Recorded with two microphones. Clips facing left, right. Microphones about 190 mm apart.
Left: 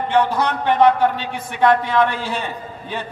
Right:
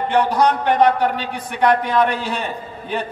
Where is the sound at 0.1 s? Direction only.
15° right (ahead or behind).